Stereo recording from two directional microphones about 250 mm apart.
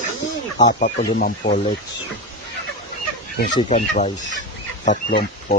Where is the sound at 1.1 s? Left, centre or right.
Left.